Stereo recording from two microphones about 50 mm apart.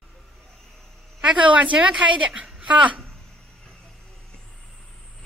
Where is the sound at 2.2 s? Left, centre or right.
Centre.